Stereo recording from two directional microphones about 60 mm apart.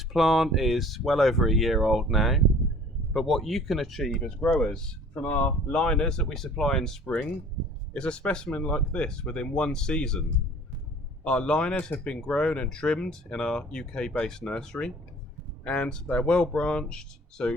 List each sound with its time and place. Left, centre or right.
0.1 s speech: centre
5.1 s speech: left